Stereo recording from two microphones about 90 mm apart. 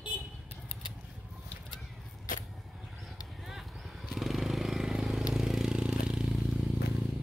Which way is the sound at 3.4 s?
Centre (ahead or behind).